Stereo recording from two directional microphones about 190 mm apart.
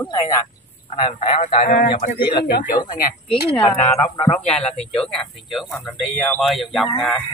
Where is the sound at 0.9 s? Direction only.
30° left (ahead or behind); by 1.9 s 45° left (ahead or behind).